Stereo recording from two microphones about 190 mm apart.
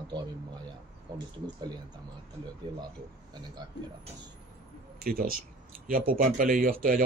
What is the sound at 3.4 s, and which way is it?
Speech, 20° right (ahead or behind).